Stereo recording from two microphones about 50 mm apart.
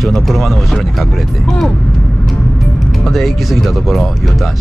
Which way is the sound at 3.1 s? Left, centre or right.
Centre.